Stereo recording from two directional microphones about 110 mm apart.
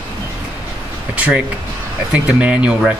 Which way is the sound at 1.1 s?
10° right (ahead or behind).